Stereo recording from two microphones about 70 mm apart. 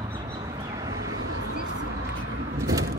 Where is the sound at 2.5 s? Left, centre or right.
Right.